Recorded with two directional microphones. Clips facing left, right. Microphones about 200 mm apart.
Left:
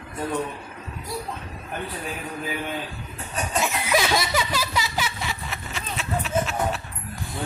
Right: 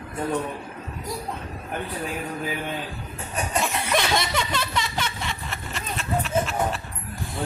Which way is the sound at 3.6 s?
5° left (ahead or behind).